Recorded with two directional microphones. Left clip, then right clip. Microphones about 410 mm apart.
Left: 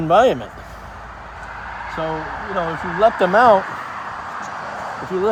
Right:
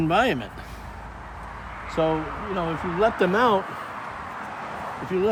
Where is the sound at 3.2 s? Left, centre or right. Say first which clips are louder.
Left 9 dB; centre.